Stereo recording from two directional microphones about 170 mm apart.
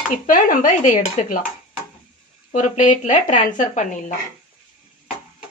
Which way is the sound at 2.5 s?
45° left (ahead or behind).